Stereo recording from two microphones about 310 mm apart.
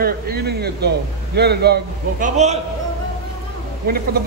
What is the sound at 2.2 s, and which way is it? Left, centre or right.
Speech, right.